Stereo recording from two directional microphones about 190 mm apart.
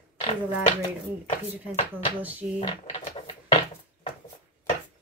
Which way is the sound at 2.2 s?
10° right (ahead or behind).